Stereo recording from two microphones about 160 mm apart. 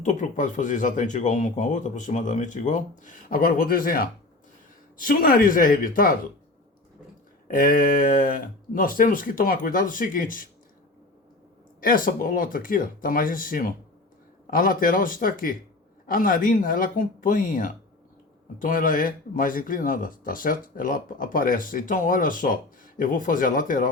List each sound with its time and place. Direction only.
0.0 s speech: 50° left (ahead or behind)
7.4 s speech: 65° left (ahead or behind)
11.8 s speech: 60° left (ahead or behind)